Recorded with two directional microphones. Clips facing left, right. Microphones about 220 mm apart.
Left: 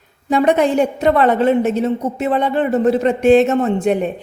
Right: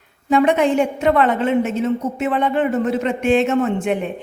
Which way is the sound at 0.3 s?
40° left (ahead or behind).